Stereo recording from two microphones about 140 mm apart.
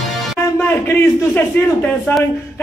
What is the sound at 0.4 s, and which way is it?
A man's voice, 15° left (ahead or behind).